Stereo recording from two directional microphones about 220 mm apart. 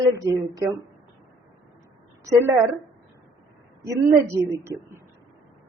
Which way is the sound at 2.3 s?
10° right (ahead or behind).